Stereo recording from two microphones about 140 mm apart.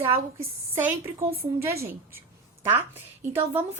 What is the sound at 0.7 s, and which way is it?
Speech, 15° right (ahead or behind).